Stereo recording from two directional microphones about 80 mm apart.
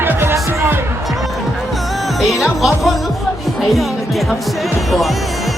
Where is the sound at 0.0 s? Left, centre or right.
Right.